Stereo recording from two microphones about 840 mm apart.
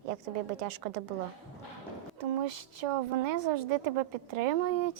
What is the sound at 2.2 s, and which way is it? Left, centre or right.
A woman's voice, right.